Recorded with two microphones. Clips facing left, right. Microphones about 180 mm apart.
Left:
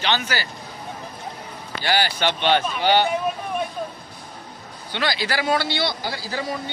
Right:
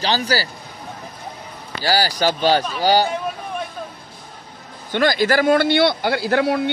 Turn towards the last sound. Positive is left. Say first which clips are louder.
# right 10 dB
turn(degrees=-70)  # may be behind; listen again after turning